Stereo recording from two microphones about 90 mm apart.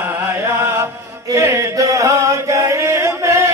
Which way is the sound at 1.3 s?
35° right (ahead or behind).